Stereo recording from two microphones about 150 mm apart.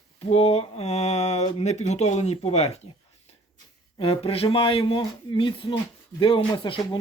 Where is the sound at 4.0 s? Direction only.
40° left (ahead or behind).